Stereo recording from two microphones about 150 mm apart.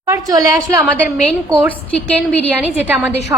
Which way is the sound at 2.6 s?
10° right (ahead or behind).